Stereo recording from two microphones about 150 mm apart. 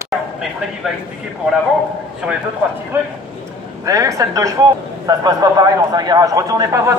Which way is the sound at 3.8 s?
20° right (ahead or behind).